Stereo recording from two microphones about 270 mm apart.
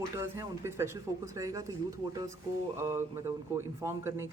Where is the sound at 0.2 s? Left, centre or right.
Centre.